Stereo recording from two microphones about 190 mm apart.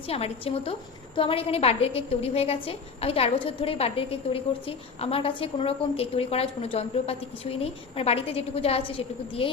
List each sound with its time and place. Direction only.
0.1 s a woman's voice: 30° left (ahead or behind)